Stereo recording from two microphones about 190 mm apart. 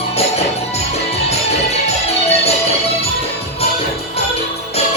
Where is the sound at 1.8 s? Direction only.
35° left (ahead or behind).